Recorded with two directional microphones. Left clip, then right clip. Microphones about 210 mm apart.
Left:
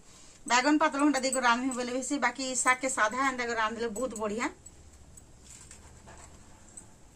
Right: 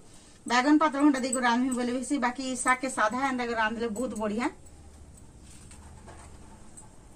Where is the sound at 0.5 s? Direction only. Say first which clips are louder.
Right 2 dB; 15° left (ahead or behind).